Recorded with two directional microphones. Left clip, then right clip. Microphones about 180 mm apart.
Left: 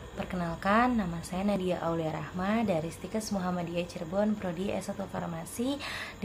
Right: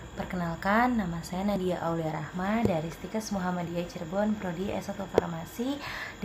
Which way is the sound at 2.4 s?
25° left (ahead or behind).